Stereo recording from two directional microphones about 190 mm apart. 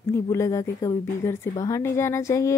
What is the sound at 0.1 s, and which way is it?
A woman's voice, 15° left (ahead or behind).